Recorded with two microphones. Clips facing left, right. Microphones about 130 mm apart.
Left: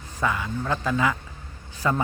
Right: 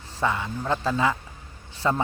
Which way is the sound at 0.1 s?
25° right (ahead or behind).